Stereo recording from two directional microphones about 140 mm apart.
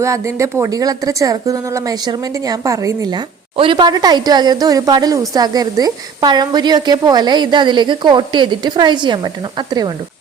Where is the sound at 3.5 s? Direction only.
40° right (ahead or behind).